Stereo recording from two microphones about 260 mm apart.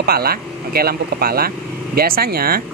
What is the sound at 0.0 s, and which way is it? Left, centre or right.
A man's voice, right.